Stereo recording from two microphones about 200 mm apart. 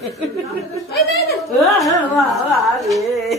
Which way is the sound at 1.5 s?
Centre (ahead or behind).